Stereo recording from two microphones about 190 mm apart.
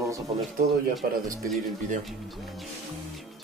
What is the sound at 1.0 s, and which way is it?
Speech, 50° right (ahead or behind).